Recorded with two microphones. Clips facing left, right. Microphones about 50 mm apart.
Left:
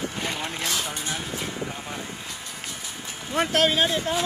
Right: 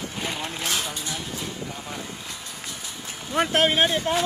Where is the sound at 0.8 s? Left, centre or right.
Left.